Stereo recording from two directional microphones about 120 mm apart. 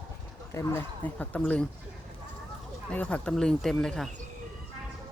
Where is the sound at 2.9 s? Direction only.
10° left (ahead or behind).